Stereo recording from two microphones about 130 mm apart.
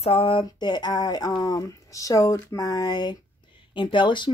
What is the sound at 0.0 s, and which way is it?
Speech, 45° left (ahead or behind).